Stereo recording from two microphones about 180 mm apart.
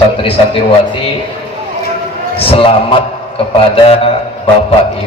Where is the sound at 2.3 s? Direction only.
30° left (ahead or behind).